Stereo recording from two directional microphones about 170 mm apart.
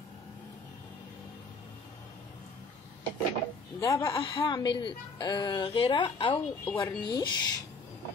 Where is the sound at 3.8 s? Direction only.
20° left (ahead or behind).